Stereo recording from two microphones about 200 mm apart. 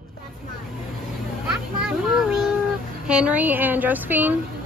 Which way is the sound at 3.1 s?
5° right (ahead or behind).